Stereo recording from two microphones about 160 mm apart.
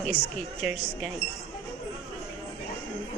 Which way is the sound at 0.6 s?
5° right (ahead or behind).